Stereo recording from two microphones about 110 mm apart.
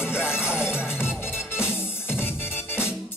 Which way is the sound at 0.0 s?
20° left (ahead or behind).